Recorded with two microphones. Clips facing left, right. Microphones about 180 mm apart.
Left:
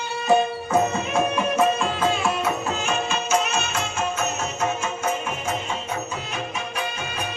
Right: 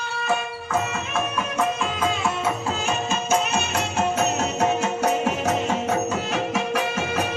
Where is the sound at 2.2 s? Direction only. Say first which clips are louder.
Left 1 dB; 25° right (ahead or behind).